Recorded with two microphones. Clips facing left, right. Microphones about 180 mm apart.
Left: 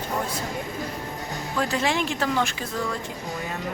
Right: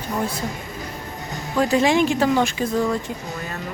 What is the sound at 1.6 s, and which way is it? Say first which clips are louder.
Speech: right 8 dB; 15° right (ahead or behind).